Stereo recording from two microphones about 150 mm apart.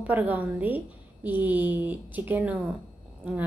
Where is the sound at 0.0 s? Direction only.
10° right (ahead or behind).